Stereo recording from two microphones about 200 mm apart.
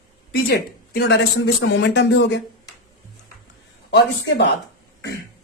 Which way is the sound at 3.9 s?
60° left (ahead or behind).